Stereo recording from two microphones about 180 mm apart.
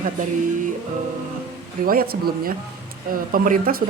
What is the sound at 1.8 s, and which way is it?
Speech, 55° right (ahead or behind).